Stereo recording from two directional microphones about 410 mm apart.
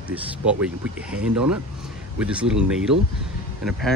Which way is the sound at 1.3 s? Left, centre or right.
Right.